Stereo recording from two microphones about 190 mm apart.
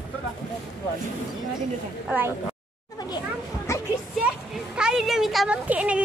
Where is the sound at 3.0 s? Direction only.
20° left (ahead or behind).